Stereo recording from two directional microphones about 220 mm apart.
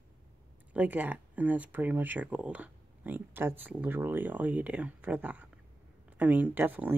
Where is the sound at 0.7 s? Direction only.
5° right (ahead or behind).